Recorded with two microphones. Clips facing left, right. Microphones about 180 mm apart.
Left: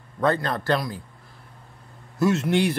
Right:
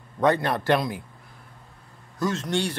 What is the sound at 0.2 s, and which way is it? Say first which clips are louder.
Speech: right 1 dB; 15° right (ahead or behind).